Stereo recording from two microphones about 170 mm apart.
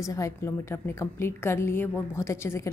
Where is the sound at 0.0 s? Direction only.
20° left (ahead or behind).